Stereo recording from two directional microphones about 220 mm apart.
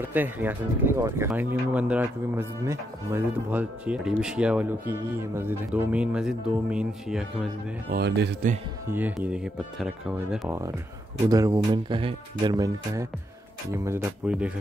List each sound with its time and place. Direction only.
0.0 s speech: 10° right (ahead or behind)
7.9 s speech: 50° right (ahead or behind)
8.8 s speech: 10° right (ahead or behind)
11.2 s speech: 15° right (ahead or behind)